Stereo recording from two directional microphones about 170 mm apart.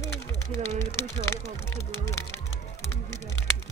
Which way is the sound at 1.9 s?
15° left (ahead or behind).